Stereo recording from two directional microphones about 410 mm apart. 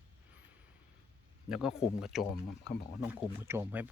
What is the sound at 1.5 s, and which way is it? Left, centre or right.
Speech, centre.